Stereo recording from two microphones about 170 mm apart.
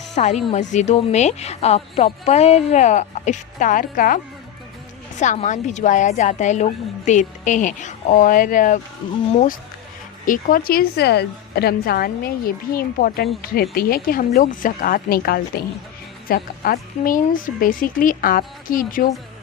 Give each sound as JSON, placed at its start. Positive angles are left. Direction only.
{"t": 0.2, "sound": "a woman's voice", "side_deg": 40}
{"t": 5.2, "sound": "a woman's voice", "side_deg": 45}
{"t": 10.2, "sound": "a woman's voice", "side_deg": 55}